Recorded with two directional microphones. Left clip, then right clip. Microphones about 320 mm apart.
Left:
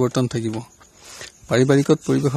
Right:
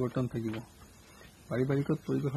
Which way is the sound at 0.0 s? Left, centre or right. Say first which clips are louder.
Left 13 dB; left.